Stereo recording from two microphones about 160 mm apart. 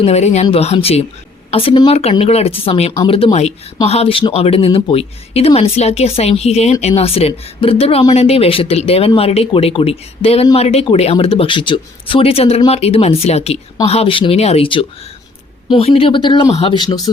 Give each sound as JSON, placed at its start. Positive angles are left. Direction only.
{"t": 0.0, "sound": "speech", "side_deg": 45}